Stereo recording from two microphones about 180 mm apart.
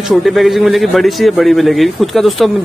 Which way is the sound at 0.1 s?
Centre (ahead or behind).